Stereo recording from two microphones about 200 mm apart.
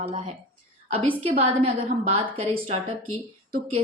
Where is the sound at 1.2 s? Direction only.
25° right (ahead or behind).